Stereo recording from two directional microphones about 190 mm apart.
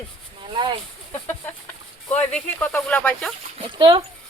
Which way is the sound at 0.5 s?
25° right (ahead or behind).